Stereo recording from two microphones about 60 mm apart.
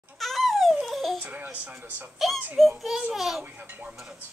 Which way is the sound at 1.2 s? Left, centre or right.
Right.